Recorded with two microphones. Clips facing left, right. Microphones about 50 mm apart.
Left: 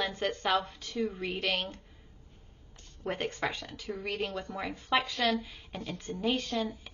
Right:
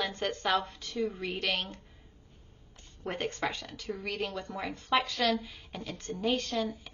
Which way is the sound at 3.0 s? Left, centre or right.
Centre.